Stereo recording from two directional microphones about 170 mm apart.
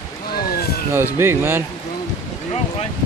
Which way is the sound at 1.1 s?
15° right (ahead or behind).